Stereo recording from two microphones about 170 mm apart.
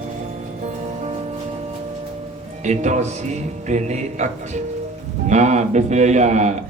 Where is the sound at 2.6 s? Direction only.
45° right (ahead or behind).